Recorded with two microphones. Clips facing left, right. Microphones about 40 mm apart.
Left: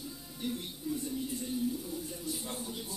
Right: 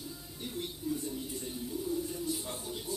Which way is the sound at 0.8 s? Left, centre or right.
Left.